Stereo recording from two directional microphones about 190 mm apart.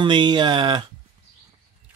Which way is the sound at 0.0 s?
25° right (ahead or behind).